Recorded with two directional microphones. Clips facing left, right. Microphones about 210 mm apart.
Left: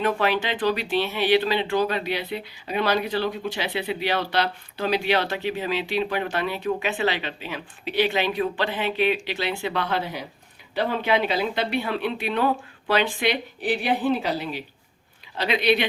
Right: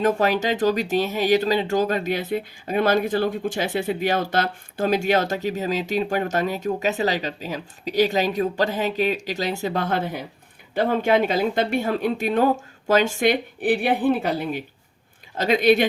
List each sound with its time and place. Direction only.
0.2 s a woman's voice: 40° right (ahead or behind)